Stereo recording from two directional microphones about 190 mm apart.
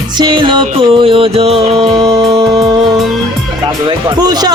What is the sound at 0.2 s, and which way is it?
Music, 25° right (ahead or behind).